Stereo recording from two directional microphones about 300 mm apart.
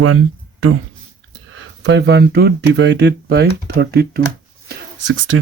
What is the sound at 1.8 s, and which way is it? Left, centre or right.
Speech, right.